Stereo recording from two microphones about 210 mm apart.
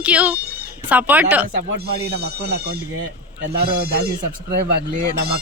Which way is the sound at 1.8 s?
50° right (ahead or behind).